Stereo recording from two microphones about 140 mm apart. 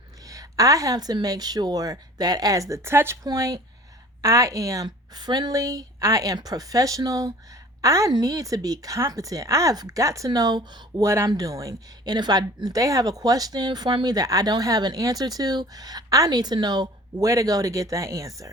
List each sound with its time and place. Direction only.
0.3 s a woman's voice: 25° right (ahead or behind)